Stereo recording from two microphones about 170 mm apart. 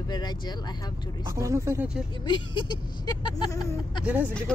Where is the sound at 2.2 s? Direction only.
25° left (ahead or behind).